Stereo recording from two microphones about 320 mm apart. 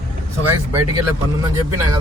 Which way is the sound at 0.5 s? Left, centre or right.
Centre.